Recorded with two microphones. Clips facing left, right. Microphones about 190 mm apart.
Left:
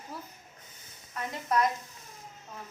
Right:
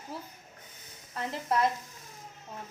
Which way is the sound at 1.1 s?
30° right (ahead or behind).